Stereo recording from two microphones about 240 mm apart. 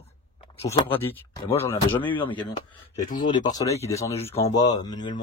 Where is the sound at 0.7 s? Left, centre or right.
Centre.